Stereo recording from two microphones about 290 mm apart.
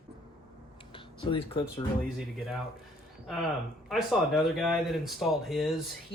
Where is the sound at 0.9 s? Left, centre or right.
Centre.